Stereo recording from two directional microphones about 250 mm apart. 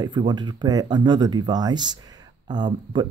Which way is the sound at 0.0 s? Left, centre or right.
Centre.